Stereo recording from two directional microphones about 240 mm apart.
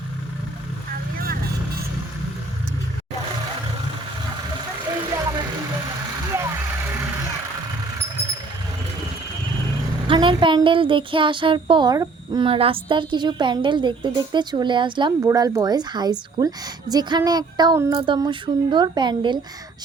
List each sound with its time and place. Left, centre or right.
5.1 s vehicle: centre
10.1 s a sound: right
16.9 s speech: centre